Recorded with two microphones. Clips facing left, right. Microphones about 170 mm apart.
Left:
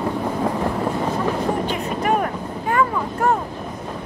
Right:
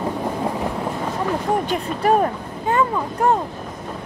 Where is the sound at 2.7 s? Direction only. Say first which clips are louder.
Right 1 dB; 20° right (ahead or behind).